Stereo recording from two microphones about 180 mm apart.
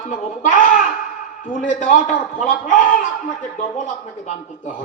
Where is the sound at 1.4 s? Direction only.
45° left (ahead or behind).